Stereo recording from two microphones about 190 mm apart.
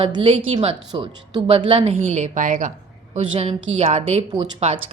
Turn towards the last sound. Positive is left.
turn(degrees=-35)  # may be behind; listen again after turning